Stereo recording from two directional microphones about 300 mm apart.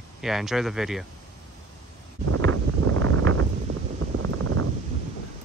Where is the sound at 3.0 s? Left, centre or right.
Right.